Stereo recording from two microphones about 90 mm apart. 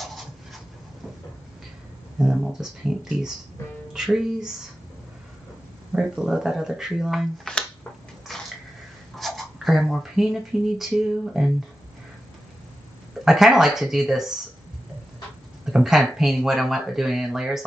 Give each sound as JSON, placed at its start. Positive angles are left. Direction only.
{"t": 0.0, "sound": "a sound", "side_deg": 0}
{"t": 2.1, "sound": "speech", "side_deg": -5}
{"t": 5.9, "sound": "speech", "side_deg": -5}
{"t": 7.5, "sound": "a sound", "side_deg": 5}
{"t": 9.1, "sound": "speech", "side_deg": 0}
{"t": 13.2, "sound": "speech", "side_deg": -5}
{"t": 15.6, "sound": "speech", "side_deg": -5}